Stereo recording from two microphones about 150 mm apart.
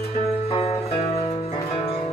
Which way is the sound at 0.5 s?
45° left (ahead or behind).